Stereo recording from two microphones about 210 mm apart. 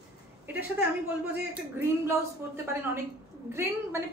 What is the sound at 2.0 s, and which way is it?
A woman's voice, 10° right (ahead or behind).